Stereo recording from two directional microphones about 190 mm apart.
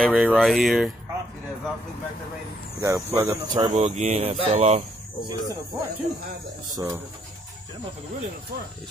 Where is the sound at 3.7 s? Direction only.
35° right (ahead or behind).